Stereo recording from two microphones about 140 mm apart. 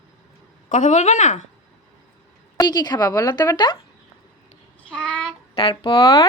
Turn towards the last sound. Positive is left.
turn(degrees=35)  # may be behind; listen again after turning